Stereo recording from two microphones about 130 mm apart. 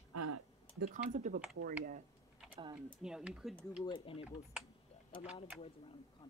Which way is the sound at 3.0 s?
5° right (ahead or behind).